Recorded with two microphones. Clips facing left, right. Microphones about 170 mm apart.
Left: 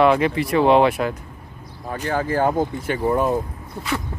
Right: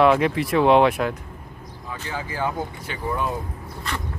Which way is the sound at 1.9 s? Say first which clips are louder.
Left 9 dB; 50° left (ahead or behind).